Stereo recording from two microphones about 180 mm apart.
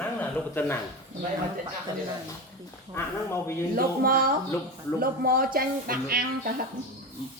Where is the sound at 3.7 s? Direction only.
55° right (ahead or behind).